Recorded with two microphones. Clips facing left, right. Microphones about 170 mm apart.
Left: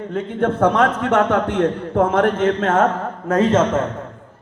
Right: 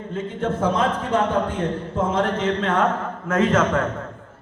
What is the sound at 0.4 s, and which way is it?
A man's voice, 65° left (ahead or behind).